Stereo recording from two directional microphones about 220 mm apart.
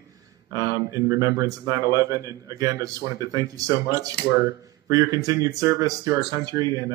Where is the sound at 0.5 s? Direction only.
15° right (ahead or behind).